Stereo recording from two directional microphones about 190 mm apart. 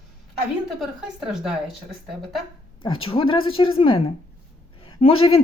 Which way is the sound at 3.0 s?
30° left (ahead or behind).